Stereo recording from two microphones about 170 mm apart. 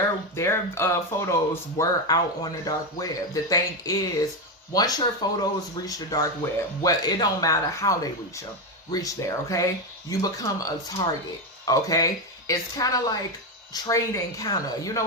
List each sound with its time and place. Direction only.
0.3 s speech: 15° left (ahead or behind)